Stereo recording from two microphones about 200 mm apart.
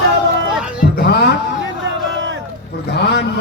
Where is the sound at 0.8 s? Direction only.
55° left (ahead or behind).